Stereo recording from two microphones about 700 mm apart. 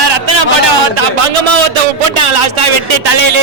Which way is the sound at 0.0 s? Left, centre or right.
Right.